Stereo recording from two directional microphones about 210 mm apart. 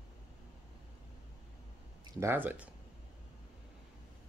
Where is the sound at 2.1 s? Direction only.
10° right (ahead or behind).